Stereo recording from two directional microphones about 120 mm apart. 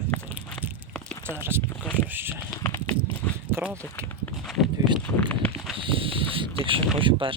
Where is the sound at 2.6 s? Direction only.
20° left (ahead or behind).